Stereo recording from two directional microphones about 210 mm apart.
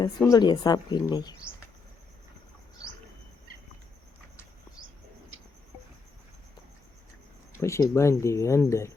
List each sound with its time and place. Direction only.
0.2 s speech: 15° left (ahead or behind)
7.5 s speech: 15° left (ahead or behind)